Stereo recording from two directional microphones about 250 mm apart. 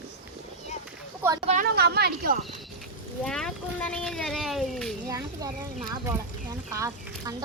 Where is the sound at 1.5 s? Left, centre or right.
Right.